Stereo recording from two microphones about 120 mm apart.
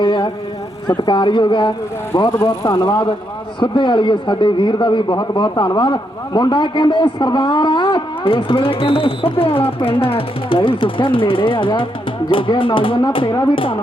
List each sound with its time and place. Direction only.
0.0 s a sound: 45° left (ahead or behind)
0.9 s speech: 40° left (ahead or behind)
3.6 s a man's voice: 40° left (ahead or behind)